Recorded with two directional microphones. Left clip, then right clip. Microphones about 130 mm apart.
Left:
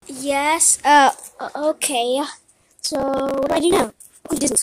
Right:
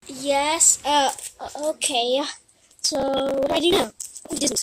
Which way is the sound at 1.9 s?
5° left (ahead or behind).